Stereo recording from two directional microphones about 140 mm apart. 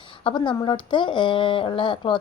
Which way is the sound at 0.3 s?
35° left (ahead or behind).